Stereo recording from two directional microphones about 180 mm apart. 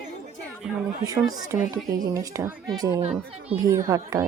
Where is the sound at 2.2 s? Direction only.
20° right (ahead or behind).